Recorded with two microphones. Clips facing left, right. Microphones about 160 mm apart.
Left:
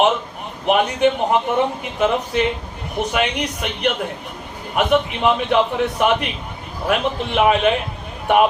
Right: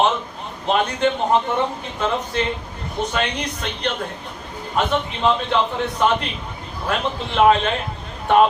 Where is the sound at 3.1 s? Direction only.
15° left (ahead or behind).